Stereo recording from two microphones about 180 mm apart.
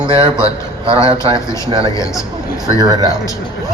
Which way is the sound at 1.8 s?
20° left (ahead or behind).